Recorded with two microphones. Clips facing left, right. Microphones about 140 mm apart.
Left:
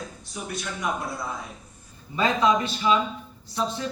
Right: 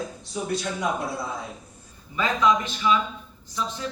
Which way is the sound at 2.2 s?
35° left (ahead or behind).